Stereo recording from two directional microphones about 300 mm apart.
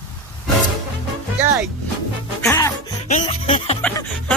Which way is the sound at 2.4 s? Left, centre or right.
Centre.